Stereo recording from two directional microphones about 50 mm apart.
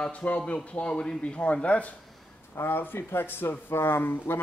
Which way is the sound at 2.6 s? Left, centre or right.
Left.